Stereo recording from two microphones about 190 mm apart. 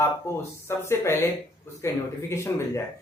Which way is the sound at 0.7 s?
15° left (ahead or behind).